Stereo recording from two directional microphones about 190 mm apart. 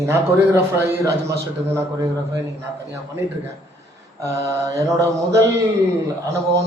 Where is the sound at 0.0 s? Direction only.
10° right (ahead or behind).